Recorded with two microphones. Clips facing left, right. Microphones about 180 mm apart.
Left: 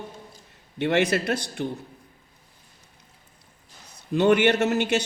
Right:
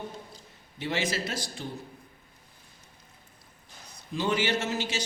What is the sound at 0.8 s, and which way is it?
Speech, 65° left (ahead or behind).